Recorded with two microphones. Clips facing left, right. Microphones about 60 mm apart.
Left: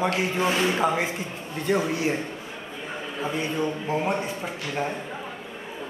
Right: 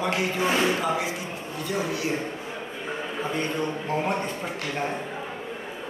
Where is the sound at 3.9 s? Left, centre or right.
Centre.